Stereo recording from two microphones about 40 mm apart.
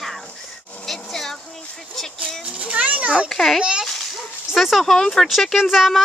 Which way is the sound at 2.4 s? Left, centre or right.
Right.